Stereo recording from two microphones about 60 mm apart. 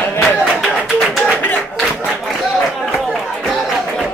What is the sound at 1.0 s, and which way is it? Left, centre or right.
Music, centre.